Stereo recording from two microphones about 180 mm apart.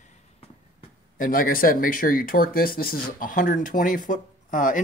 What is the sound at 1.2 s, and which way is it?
Speech, 50° left (ahead or behind).